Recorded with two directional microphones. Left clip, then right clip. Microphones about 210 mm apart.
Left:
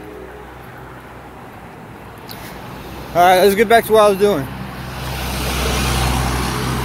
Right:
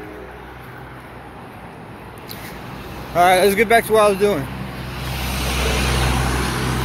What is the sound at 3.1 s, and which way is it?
Speech, 25° left (ahead or behind).